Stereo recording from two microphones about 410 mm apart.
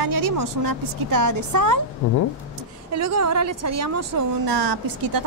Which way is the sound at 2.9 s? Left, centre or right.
Right.